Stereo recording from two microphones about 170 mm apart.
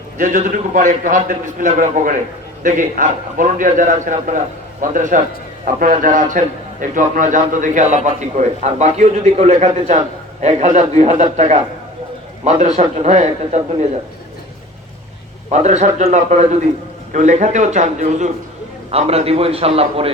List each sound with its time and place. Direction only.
0.2 s a man's voice: 50° right (ahead or behind)
15.5 s a man's voice: 45° right (ahead or behind)